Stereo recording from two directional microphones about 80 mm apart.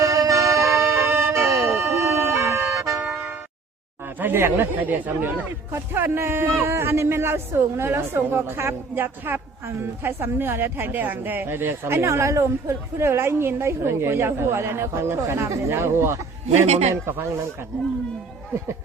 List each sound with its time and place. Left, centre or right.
0.0 s music: right
4.2 s speech: right